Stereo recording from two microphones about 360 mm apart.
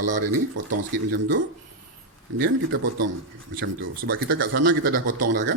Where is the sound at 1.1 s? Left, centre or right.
Right.